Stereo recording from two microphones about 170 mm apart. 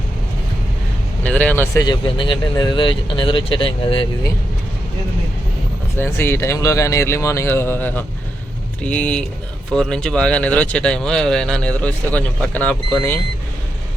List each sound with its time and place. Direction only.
1.2 s speech: 10° left (ahead or behind)
1.8 s speech: 25° left (ahead or behind)
6.0 s speech: 15° left (ahead or behind)